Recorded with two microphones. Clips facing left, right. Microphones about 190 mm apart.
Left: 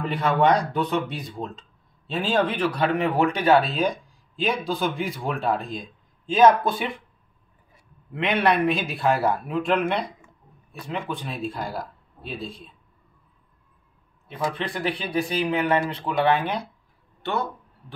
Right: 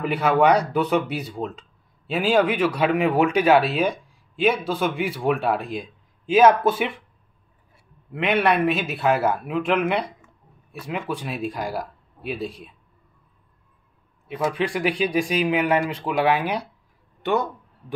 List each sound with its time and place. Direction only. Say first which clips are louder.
0.0 s speech: right 2 dB; 5° right (ahead or behind)
2.0 s speech: right 4 dB; 10° right (ahead or behind)
8.1 s a man's voice: right 1 dB; 5° right (ahead or behind)
14.5 s speech: right 4 dB; 10° right (ahead or behind)
17.2 s a sound: right 5 dB; 15° right (ahead or behind)